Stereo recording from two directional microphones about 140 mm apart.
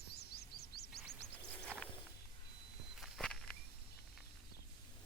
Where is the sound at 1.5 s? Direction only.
10° left (ahead or behind).